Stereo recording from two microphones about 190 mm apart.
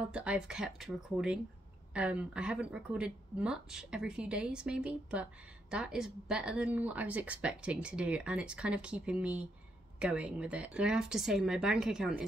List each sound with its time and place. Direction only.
0.0 s speech: 5° right (ahead or behind)